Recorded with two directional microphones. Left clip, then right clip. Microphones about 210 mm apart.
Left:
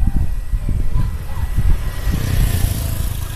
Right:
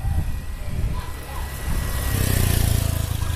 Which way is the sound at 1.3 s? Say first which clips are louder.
Even; 45° right (ahead or behind).